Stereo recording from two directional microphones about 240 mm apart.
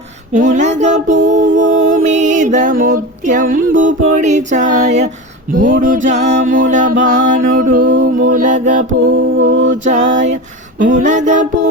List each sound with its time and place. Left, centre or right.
0.3 s music: right
9.4 s mantra: right
9.8 s music: right